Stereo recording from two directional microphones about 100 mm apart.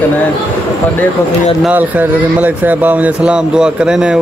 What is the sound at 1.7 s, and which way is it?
Speech, 15° right (ahead or behind).